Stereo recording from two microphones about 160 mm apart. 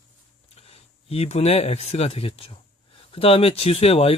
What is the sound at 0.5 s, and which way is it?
Speech, 40° left (ahead or behind).